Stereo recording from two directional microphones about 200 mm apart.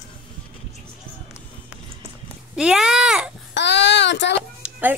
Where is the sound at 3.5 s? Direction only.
60° left (ahead or behind).